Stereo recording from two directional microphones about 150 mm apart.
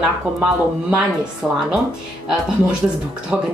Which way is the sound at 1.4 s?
5° right (ahead or behind).